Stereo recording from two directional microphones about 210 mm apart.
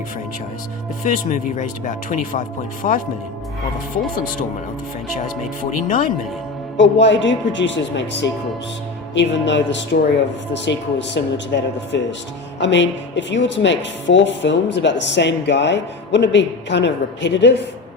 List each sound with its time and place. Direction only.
1.0 s speech: 35° left (ahead or behind)
6.7 s speech: 60° left (ahead or behind)